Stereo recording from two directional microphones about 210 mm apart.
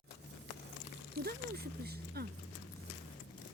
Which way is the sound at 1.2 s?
50° right (ahead or behind).